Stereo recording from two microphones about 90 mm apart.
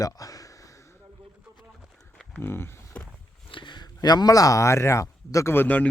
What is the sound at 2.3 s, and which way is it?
Speech, 25° left (ahead or behind).